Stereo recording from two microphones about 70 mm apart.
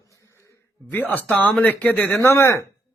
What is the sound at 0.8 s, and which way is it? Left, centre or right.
Speech, left.